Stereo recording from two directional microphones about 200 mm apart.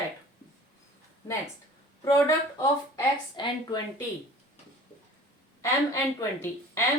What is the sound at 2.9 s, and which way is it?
Speech, 20° left (ahead or behind).